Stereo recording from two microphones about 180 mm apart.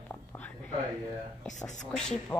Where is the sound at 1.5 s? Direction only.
40° left (ahead or behind).